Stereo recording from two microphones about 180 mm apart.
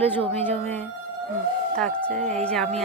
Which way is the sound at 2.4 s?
5° left (ahead or behind).